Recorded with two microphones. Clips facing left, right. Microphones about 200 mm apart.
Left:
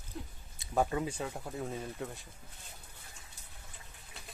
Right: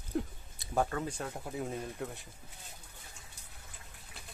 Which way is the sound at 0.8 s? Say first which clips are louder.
Left 2 dB; 10° left (ahead or behind).